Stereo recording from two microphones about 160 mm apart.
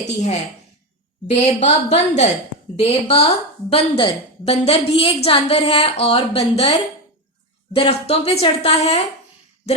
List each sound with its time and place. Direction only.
0.0 s a woman's voice: 45° left (ahead or behind)
7.8 s a woman's voice: 40° left (ahead or behind)